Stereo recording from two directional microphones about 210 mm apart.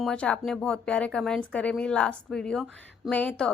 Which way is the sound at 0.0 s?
5° left (ahead or behind).